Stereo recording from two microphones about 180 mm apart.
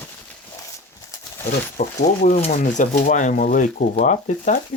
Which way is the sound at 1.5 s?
45° left (ahead or behind).